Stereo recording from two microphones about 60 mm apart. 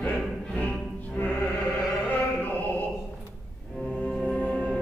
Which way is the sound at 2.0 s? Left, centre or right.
Left.